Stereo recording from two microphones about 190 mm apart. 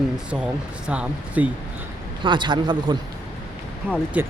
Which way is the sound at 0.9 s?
5° right (ahead or behind).